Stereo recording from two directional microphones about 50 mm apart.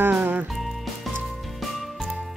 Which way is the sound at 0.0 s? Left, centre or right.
Right.